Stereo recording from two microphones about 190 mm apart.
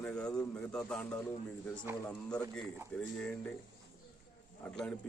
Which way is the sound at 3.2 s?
5° left (ahead or behind).